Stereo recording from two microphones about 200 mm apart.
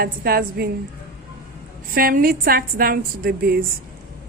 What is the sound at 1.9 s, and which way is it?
A woman's voice, 45° right (ahead or behind).